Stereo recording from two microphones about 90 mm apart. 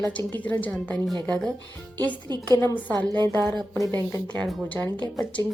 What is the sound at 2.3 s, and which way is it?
Speech, 50° right (ahead or behind).